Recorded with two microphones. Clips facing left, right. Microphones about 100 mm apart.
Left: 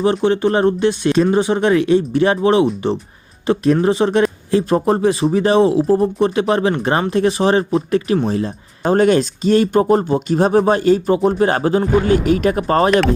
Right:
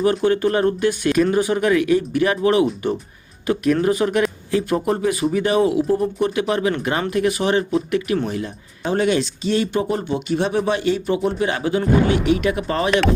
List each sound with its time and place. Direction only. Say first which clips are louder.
0.0 s speech: left 2 dB; 25° left (ahead or behind)
8.8 s speech: left 6 dB; 45° left (ahead or behind)